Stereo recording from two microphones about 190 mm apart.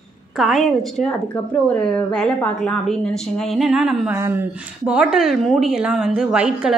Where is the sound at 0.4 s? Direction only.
Centre (ahead or behind).